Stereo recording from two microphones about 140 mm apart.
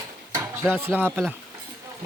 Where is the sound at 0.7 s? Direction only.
15° right (ahead or behind).